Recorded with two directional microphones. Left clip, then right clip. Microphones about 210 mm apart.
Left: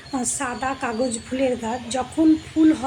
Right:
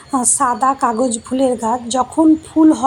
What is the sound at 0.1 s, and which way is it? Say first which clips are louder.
A woman's voice: right 11 dB; 20° right (ahead or behind).